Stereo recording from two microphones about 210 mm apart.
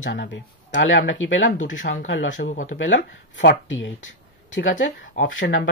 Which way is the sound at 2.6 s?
60° left (ahead or behind).